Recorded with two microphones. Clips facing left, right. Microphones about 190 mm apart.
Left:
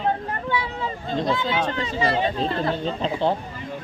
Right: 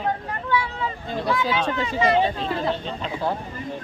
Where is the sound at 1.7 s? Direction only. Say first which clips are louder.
Right 3 dB; 35° left (ahead or behind).